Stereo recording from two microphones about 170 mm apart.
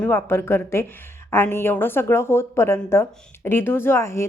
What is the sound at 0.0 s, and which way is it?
A woman's voice, 15° left (ahead or behind).